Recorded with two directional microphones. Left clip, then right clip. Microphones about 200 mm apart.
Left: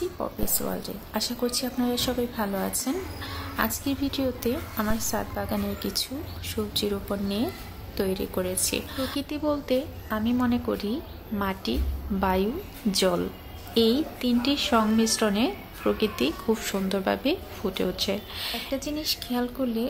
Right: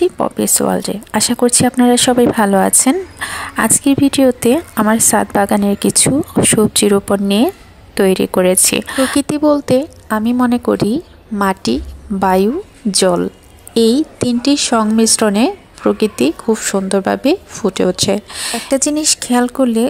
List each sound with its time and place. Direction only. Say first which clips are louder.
0.0 s speech: right 16 dB; 45° right (ahead or behind)